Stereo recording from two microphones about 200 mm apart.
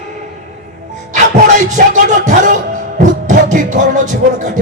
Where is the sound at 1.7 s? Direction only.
40° right (ahead or behind).